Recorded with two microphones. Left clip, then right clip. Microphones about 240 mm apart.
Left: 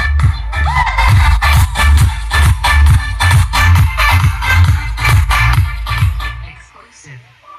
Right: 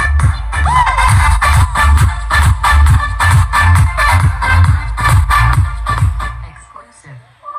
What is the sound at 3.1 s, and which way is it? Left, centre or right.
Music, centre.